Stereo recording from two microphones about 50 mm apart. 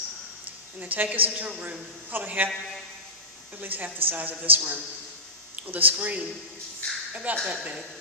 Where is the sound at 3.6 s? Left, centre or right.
Right.